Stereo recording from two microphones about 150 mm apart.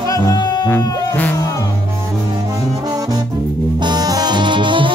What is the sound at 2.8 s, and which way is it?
Music, 25° right (ahead or behind).